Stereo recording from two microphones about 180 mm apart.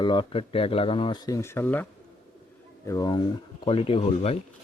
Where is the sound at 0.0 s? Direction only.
25° left (ahead or behind).